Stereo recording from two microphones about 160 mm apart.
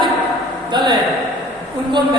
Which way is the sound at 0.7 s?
30° right (ahead or behind).